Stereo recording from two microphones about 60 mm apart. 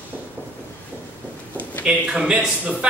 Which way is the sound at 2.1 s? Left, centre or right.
Centre.